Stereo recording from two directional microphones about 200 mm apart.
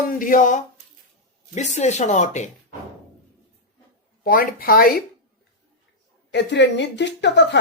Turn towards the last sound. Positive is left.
turn(degrees=60)  # may be behind; listen again after turning